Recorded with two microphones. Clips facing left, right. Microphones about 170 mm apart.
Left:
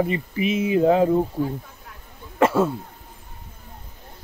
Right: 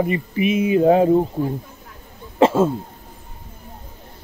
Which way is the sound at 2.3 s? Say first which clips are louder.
Right 3 dB; 25° right (ahead or behind).